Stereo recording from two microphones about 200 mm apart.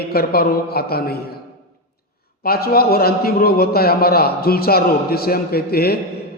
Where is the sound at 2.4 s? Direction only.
50° left (ahead or behind).